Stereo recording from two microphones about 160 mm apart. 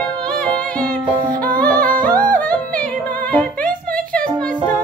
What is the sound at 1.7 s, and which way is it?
Music, 60° right (ahead or behind).